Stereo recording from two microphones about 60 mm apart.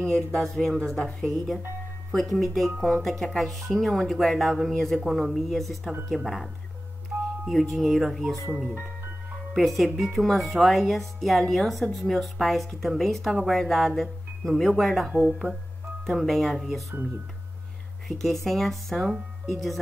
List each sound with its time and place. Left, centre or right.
0.0 s speech: centre
7.1 s music: right
7.7 s speech: centre
9.5 s speech: centre
15.0 s speech: centre
16.1 s speech: centre
18.0 s speech: centre